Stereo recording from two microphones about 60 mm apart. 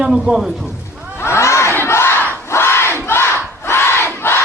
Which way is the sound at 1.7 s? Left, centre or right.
Left.